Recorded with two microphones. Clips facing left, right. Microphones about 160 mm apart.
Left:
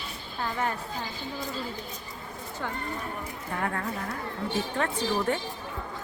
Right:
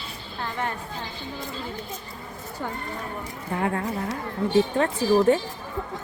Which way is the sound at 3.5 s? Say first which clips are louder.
Right 5 dB; 20° right (ahead or behind).